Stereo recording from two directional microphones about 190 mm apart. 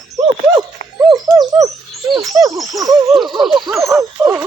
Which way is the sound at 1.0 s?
20° right (ahead or behind).